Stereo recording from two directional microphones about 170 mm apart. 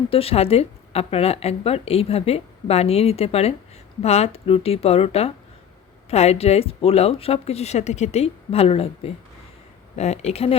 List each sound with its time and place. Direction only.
0.1 s speech: 35° left (ahead or behind)